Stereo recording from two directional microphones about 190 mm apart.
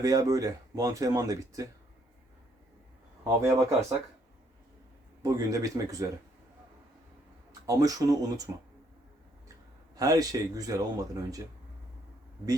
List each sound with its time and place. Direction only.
0.0 s speech: 15° right (ahead or behind)
3.4 s speech: 15° right (ahead or behind)
5.2 s speech: 15° right (ahead or behind)
7.7 s speech: 20° right (ahead or behind)
9.9 s speech: 20° right (ahead or behind)